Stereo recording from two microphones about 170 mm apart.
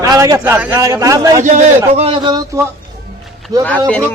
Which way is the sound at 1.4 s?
45° right (ahead or behind).